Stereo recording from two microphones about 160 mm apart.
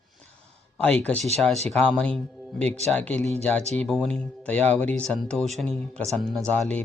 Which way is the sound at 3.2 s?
45° right (ahead or behind).